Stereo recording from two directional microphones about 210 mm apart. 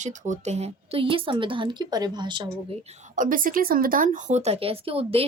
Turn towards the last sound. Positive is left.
turn(degrees=-25)  # may be behind; listen again after turning